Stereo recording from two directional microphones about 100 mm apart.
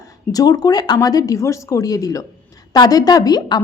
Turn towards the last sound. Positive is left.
turn(degrees=45)  # may be behind; listen again after turning